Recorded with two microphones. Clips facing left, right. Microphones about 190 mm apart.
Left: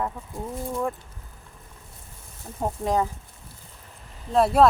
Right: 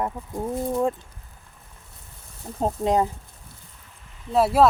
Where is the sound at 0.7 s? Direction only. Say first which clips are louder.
Right 4 dB; 25° right (ahead or behind).